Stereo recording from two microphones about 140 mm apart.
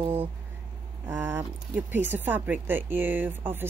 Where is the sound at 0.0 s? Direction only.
15° right (ahead or behind).